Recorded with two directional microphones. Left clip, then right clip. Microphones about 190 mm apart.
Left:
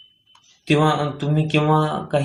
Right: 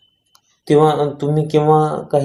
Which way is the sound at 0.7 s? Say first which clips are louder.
Right 6 dB; 15° right (ahead or behind).